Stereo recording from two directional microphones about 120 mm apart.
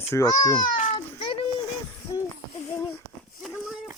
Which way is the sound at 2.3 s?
25° left (ahead or behind).